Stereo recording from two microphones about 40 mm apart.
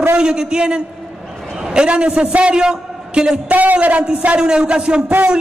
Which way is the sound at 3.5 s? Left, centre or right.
Right.